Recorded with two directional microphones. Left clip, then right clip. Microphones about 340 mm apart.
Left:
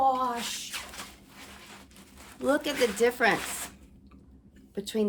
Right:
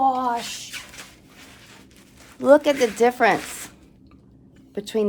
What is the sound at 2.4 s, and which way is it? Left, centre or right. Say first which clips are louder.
Speech: right 11 dB; centre.